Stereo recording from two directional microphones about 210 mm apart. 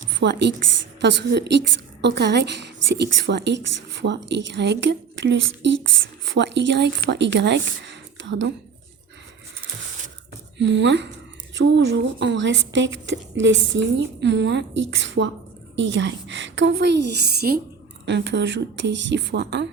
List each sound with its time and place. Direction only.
0.1 s a woman's voice: 55° right (ahead or behind)
10.6 s a woman's voice: 60° right (ahead or behind)